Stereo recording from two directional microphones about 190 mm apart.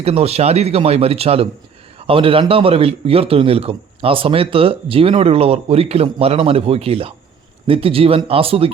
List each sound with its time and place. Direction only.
0.0 s a man's voice: 35° right (ahead or behind)